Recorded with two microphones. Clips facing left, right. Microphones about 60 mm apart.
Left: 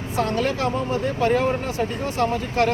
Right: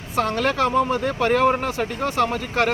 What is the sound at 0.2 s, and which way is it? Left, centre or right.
Speech, right.